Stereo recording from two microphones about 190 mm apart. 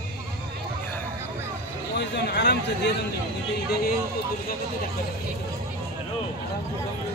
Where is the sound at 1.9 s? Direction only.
60° left (ahead or behind).